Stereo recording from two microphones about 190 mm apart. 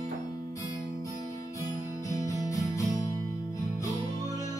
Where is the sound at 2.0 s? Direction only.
15° left (ahead or behind).